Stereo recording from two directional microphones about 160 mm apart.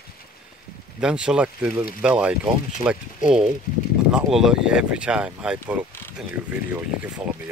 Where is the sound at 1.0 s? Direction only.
5° right (ahead or behind).